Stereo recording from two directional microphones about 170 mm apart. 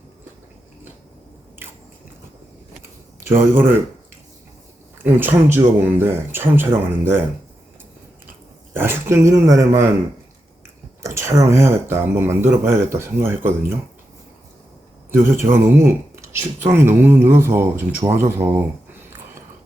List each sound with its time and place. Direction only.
3.2 s speech: 15° right (ahead or behind)
5.0 s speech: 10° right (ahead or behind)
8.7 s speech: 15° right (ahead or behind)
11.0 s speech: 15° right (ahead or behind)
15.2 s speech: 15° right (ahead or behind)